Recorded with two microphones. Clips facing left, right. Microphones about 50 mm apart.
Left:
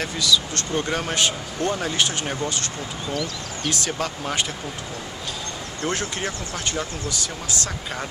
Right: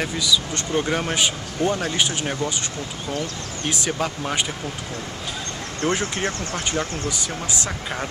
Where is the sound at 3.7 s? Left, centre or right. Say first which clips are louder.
Right 2 dB; centre.